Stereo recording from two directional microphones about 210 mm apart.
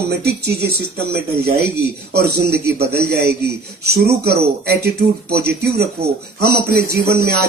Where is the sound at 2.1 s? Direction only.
50° right (ahead or behind).